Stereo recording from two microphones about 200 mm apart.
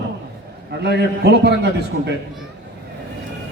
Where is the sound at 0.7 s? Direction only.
55° right (ahead or behind).